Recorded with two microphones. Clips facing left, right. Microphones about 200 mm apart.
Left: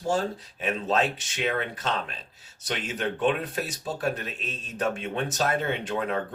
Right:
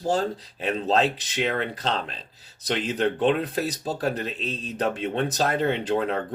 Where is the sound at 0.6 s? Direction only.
35° right (ahead or behind).